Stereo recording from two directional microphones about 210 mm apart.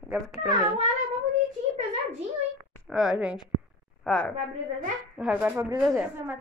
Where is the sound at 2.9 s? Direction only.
5° right (ahead or behind).